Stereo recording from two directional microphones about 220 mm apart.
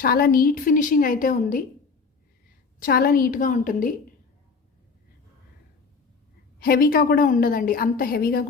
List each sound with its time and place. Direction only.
0.0 s a woman's voice: 45° left (ahead or behind)
2.8 s a woman's voice: 40° left (ahead or behind)
6.6 s a woman's voice: 40° left (ahead or behind)